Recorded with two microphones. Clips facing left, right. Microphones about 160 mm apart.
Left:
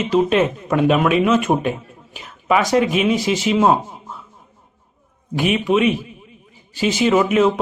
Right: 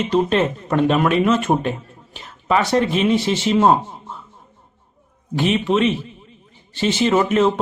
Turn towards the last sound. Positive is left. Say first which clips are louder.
# left 1 dB
turn(degrees=10)  # may be behind; listen again after turning